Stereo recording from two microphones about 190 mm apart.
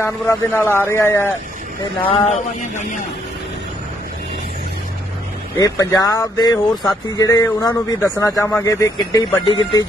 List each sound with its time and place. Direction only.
0.0 s a man's voice: 15° left (ahead or behind)
2.0 s a man's voice: 30° left (ahead or behind)
5.6 s a man's voice: 20° left (ahead or behind)